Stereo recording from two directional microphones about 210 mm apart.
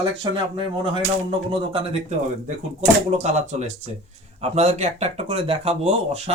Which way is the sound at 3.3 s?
35° right (ahead or behind).